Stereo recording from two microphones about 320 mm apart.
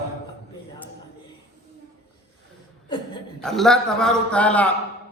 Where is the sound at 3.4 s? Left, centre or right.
Centre.